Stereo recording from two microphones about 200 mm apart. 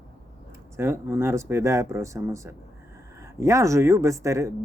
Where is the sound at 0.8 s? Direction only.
10° right (ahead or behind).